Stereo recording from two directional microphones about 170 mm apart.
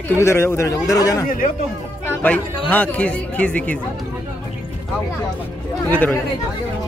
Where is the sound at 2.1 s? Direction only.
10° left (ahead or behind).